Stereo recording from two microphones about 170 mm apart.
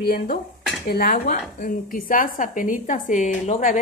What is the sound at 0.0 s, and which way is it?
A woman's voice, 60° left (ahead or behind).